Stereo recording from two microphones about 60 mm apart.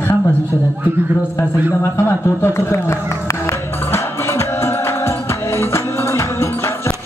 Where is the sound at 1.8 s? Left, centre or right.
Left.